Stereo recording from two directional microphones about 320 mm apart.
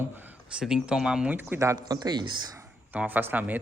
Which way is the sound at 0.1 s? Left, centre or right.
Centre.